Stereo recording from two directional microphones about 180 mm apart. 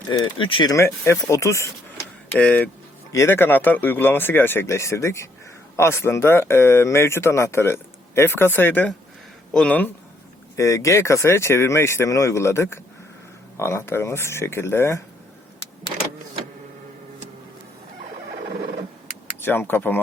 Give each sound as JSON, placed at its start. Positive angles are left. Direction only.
{"t": 0.1, "sound": "speech", "side_deg": 30}
{"t": 19.4, "sound": "speech", "side_deg": 10}